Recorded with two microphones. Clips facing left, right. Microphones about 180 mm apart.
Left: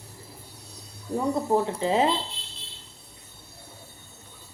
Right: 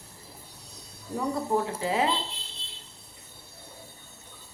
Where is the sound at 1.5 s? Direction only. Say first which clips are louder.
Left 4 dB; 25° left (ahead or behind).